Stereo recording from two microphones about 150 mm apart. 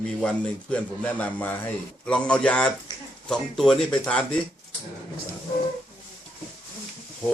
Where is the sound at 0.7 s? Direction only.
10° left (ahead or behind).